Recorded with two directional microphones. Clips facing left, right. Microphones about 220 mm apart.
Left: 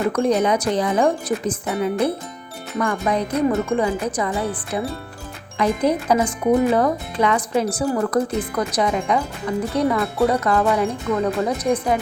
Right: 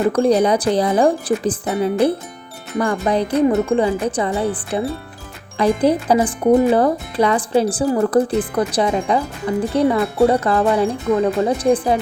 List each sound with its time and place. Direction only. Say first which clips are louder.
0.1 s speech: right 3 dB; 35° right (ahead or behind)